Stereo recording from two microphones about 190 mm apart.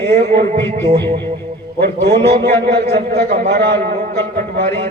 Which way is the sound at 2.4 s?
55° right (ahead or behind).